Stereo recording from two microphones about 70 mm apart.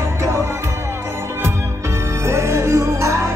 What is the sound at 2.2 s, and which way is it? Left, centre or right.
Music, right.